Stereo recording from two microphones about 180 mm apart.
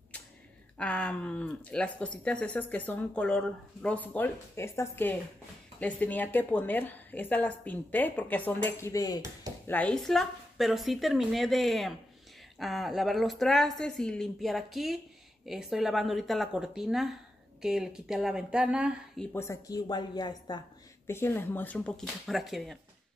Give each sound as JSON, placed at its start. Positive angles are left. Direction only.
{"t": 0.7, "sound": "speech", "side_deg": 5}
{"t": 9.7, "sound": "a woman's voice", "side_deg": 5}
{"t": 19.3, "sound": "speech", "side_deg": 15}
{"t": 21.1, "sound": "speech", "side_deg": 10}